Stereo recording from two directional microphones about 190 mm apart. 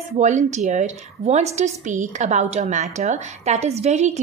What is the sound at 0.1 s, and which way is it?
A woman's voice, 40° right (ahead or behind).